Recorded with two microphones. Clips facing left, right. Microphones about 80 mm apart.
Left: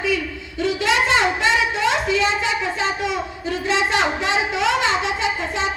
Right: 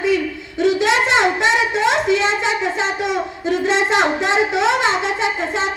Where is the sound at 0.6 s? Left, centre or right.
Right.